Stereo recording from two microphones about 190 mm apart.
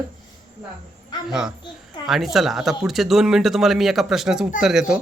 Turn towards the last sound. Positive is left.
turn(degrees=-5)  # may be behind; listen again after turning